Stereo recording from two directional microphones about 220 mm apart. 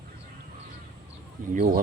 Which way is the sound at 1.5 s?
40° right (ahead or behind).